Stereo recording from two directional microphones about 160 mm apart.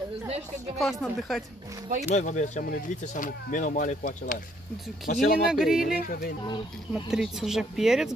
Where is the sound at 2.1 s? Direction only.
45° left (ahead or behind).